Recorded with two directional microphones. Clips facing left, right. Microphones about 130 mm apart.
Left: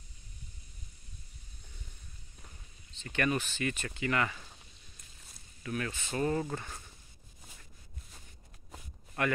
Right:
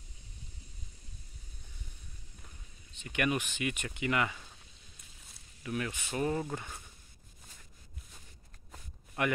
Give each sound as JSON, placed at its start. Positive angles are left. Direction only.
{"t": 3.0, "sound": "speech", "side_deg": -15}
{"t": 5.6, "sound": "speech", "side_deg": -15}
{"t": 9.2, "sound": "speech", "side_deg": -20}